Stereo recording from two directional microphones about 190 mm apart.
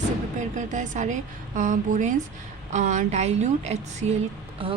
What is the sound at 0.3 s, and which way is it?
Speech, 40° right (ahead or behind).